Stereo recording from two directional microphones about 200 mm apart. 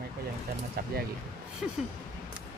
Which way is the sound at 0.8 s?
50° right (ahead or behind).